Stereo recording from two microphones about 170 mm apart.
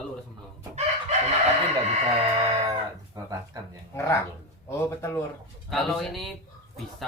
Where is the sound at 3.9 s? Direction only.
15° left (ahead or behind).